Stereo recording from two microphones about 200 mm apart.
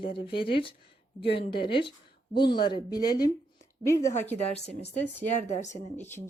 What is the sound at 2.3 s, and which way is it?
Speech, 25° left (ahead or behind).